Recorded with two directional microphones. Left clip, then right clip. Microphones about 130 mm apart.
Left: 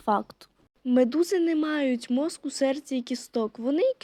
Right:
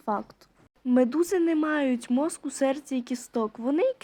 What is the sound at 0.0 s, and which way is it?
Speech, 60° left (ahead or behind).